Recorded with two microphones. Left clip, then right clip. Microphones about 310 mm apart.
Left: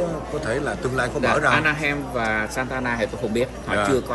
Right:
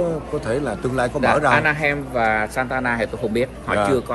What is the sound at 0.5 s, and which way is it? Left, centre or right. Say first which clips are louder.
Speech: right 1 dB; centre.